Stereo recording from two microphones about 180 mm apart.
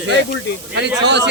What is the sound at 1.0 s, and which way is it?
Speech, 70° right (ahead or behind).